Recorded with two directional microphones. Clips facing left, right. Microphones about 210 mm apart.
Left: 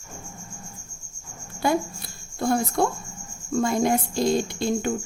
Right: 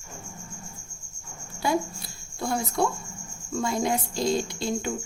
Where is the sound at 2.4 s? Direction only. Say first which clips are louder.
Left 4 dB; 50° left (ahead or behind).